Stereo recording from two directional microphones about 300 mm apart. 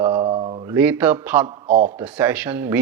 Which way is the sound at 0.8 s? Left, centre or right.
Centre.